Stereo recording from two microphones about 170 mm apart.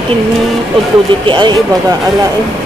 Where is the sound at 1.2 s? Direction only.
30° right (ahead or behind).